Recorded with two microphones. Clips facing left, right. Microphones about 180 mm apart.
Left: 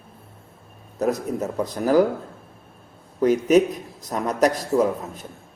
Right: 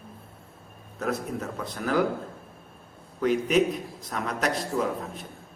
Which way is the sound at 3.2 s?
40° left (ahead or behind).